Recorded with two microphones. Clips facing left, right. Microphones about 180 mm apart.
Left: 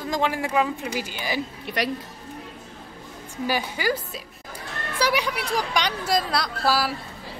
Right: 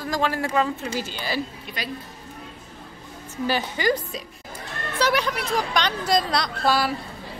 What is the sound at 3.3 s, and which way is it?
A woman's voice, 10° left (ahead or behind).